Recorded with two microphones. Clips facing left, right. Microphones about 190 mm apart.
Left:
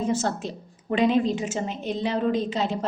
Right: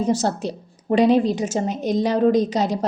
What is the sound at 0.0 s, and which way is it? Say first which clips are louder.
A woman's voice: right 4 dB; 35° right (ahead or behind).